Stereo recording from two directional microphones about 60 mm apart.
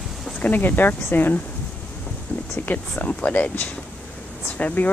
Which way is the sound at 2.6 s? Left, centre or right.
Left.